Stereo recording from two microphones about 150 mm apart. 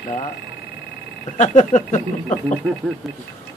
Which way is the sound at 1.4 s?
55° left (ahead or behind).